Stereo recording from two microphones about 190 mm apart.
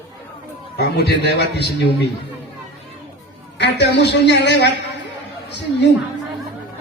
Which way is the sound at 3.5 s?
65° left (ahead or behind).